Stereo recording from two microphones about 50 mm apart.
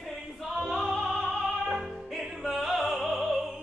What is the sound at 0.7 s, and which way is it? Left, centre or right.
Music, centre.